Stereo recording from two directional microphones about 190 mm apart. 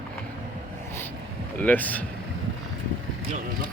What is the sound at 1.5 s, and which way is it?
Speech, 10° left (ahead or behind).